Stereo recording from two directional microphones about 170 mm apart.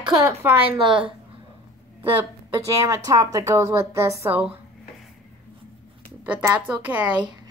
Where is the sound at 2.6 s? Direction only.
20° right (ahead or behind).